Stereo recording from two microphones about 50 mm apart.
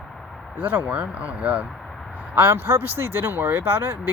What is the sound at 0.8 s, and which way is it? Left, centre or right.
Speech, right.